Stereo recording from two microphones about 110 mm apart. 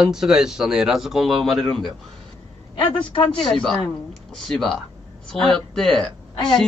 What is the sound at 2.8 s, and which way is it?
Speech, 50° left (ahead or behind).